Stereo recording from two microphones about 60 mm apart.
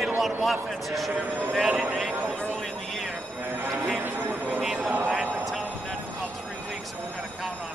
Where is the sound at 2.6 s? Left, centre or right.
Centre.